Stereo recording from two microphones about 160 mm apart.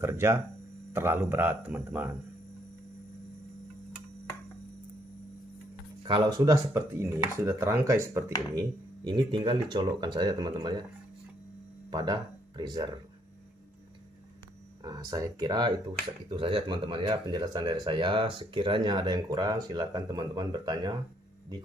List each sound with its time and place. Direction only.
0.0 s speech: 15° right (ahead or behind)
6.0 s speech: 30° right (ahead or behind)
9.0 s speech: 30° right (ahead or behind)
11.9 s speech: 25° right (ahead or behind)
14.8 s speech: 25° right (ahead or behind)